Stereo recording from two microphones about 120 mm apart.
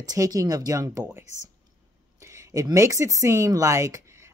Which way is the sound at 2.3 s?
30° right (ahead or behind).